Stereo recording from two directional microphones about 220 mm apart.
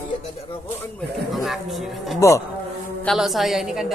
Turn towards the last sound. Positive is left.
turn(degrees=0)  # may be behind; listen again after turning